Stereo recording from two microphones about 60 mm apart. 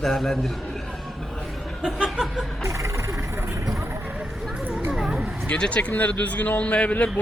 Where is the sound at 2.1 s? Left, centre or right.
Centre.